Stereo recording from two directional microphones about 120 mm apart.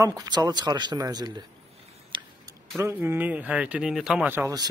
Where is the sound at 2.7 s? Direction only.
20° right (ahead or behind); by 4.2 s 5° right (ahead or behind).